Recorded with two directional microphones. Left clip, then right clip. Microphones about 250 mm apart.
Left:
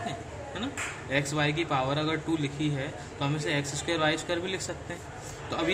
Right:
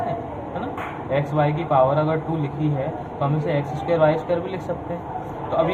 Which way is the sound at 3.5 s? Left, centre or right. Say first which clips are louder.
Right 8 dB; left.